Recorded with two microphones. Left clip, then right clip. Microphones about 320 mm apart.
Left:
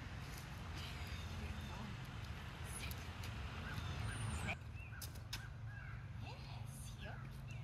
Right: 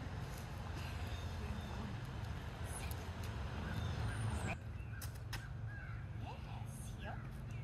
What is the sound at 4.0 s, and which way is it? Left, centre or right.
Vehicle, right.